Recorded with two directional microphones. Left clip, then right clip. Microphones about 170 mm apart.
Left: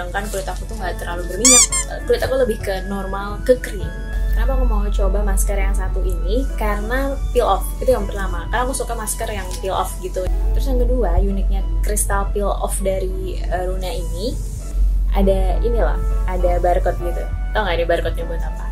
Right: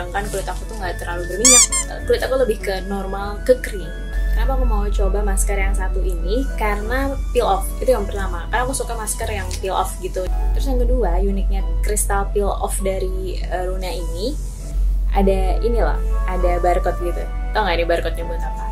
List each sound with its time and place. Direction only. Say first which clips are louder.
0.1 s a woman's voice: even; 10° right (ahead or behind)